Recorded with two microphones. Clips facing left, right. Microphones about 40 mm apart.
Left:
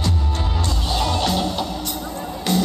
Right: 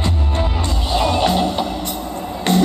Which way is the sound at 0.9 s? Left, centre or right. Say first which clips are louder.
Right 5 dB; centre.